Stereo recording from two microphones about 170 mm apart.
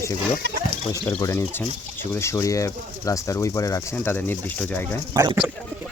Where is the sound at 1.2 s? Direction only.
15° left (ahead or behind).